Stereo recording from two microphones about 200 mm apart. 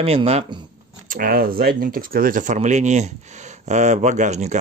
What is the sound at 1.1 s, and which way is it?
Speech, 45° right (ahead or behind).